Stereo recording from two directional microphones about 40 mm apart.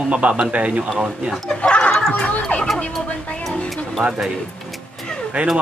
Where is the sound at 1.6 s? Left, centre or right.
Left.